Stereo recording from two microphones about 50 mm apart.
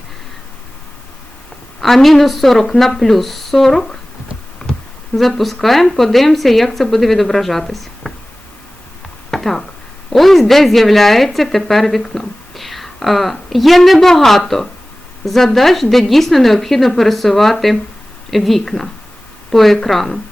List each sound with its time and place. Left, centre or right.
1.8 s a woman's voice: centre
5.1 s a woman's voice: centre
9.3 s a sound: centre
10.1 s a woman's voice: centre